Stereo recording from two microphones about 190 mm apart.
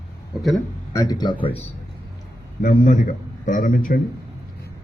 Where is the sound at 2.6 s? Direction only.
45° left (ahead or behind).